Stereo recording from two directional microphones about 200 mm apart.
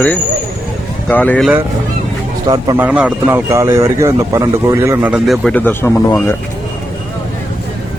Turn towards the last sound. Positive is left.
turn(degrees=10)  # may be behind; listen again after turning